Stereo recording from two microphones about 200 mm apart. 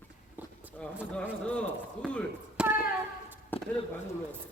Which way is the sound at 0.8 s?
5° left (ahead or behind).